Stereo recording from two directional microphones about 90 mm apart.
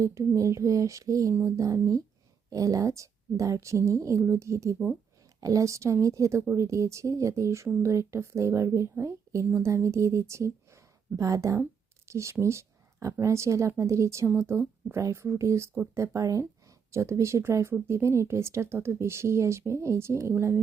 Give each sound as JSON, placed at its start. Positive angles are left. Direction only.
{"t": 0.0, "sound": "speech", "side_deg": -35}
{"t": 16.1, "sound": "speech", "side_deg": -40}